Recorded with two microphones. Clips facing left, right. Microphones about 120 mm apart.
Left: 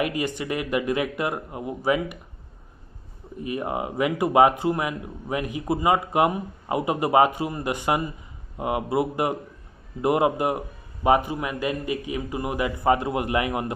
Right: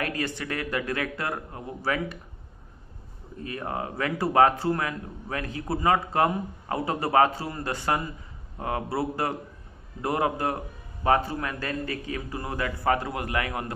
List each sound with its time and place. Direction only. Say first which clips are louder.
0.0 s speech: left 4 dB; 15° left (ahead or behind)
3.3 s a man's voice: left 4 dB; 15° left (ahead or behind)